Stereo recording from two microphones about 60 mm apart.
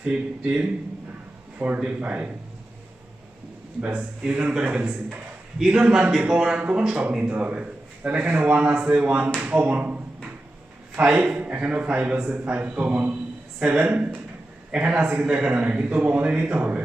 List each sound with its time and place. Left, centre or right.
0.0 s a man's voice: centre
3.8 s a man's voice: right
5.5 s a man's voice: centre; by 10.0 s right
11.2 s a man's voice: right